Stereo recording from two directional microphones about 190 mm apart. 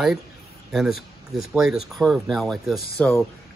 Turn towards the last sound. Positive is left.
turn(degrees=10)  # may be behind; listen again after turning